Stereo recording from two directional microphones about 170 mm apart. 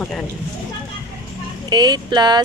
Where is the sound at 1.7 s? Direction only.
25° right (ahead or behind).